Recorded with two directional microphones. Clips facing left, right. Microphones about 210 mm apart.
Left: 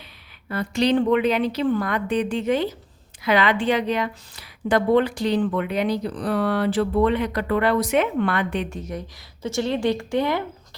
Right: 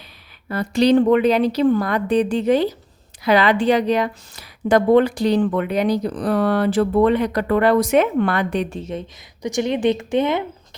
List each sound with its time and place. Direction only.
0.4 s a woman's voice: 40° right (ahead or behind)
8.8 s speech: 25° right (ahead or behind)